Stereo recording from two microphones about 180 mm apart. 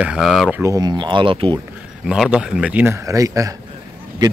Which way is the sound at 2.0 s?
Centre (ahead or behind).